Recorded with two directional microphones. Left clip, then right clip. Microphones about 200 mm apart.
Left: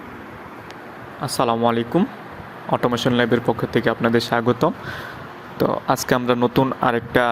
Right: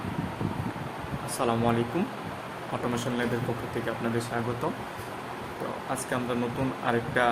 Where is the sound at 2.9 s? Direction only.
40° left (ahead or behind).